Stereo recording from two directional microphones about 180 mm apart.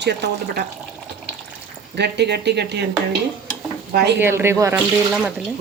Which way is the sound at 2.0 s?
70° right (ahead or behind).